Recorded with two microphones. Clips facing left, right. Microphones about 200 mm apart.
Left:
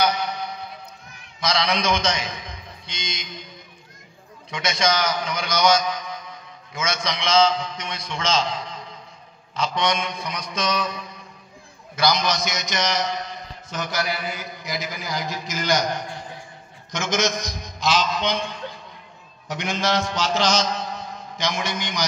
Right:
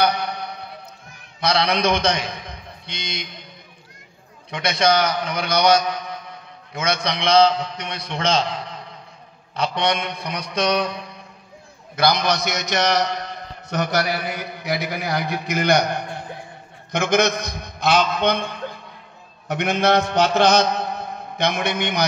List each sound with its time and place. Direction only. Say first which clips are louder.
0.0 s a sound: right 2 dB; 60° right (ahead or behind)
1.4 s a man's voice: right 3 dB; 60° right (ahead or behind)
4.5 s a man's voice: right 4 dB; 60° right (ahead or behind)
19.4 s mantra: right 6 dB; 60° right (ahead or behind)